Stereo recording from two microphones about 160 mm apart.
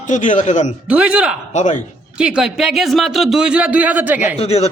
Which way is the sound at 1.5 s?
50° left (ahead or behind).